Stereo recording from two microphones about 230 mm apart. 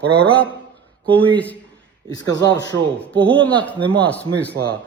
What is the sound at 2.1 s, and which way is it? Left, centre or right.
Speech, centre.